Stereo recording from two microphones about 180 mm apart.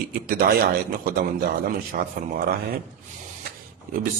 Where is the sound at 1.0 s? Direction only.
55° right (ahead or behind).